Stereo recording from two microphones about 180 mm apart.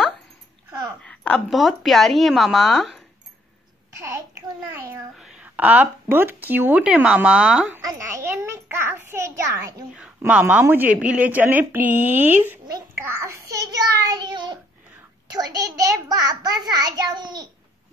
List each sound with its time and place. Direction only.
1.0 s speech: 5° left (ahead or behind)
4.0 s a sound: 15° right (ahead or behind)
5.2 s speech: 5° right (ahead or behind)
7.8 s a child's voice: 15° right (ahead or behind)
9.9 s a woman's voice: 5° right (ahead or behind)
12.7 s a sound: 15° right (ahead or behind)
15.3 s a child's voice: 20° right (ahead or behind)